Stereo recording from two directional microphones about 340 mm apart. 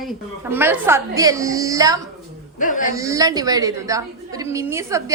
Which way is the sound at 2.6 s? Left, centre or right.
Left.